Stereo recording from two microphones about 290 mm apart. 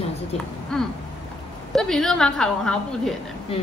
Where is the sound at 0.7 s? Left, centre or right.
Centre.